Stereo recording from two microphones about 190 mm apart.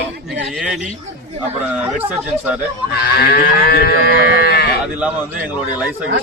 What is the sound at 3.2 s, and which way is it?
Cattle, 55° left (ahead or behind).